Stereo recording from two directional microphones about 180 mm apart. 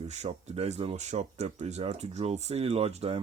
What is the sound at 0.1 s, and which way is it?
Speech, 40° right (ahead or behind).